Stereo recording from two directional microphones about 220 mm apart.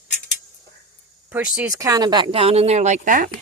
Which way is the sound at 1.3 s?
10° right (ahead or behind).